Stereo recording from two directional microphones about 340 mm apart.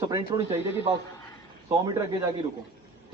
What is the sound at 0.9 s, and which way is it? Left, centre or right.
A man's voice, centre.